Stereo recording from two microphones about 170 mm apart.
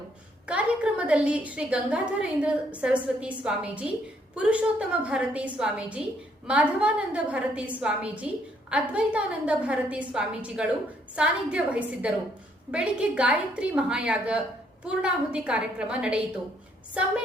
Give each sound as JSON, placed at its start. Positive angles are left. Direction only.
{"t": 0.4, "sound": "a woman's voice", "side_deg": -5}